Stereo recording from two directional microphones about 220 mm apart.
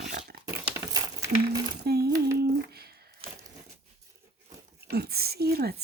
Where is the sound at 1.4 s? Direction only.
45° right (ahead or behind).